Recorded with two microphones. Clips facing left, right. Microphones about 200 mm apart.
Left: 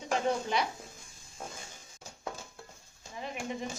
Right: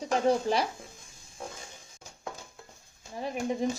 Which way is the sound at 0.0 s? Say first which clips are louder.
Right 5 dB; 35° right (ahead or behind).